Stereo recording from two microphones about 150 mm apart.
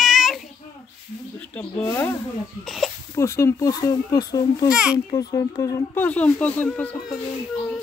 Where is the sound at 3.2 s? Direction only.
20° left (ahead or behind).